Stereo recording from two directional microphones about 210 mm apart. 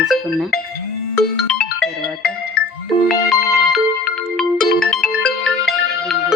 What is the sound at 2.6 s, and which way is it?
Music, 45° left (ahead or behind).